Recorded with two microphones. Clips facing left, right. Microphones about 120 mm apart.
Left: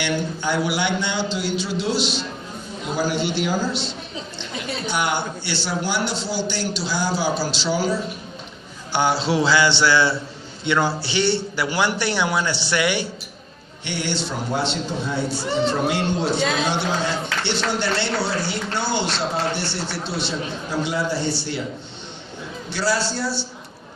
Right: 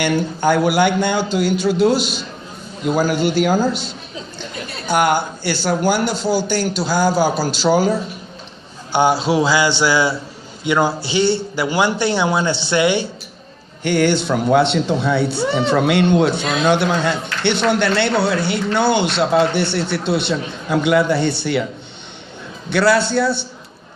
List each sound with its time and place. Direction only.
0.0 s a man's voice: 50° right (ahead or behind)
8.9 s a man's voice: 15° right (ahead or behind)
13.8 s speech: 50° right (ahead or behind)
22.7 s speech: 60° right (ahead or behind)